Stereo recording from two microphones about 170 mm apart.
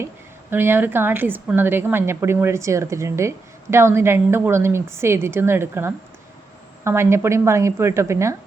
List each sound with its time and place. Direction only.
0.5 s a woman's voice: 10° right (ahead or behind)